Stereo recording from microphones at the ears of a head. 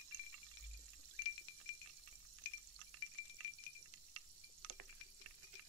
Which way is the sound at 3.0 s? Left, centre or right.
Left.